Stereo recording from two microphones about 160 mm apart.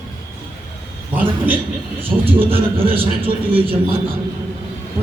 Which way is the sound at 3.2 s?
35° right (ahead or behind).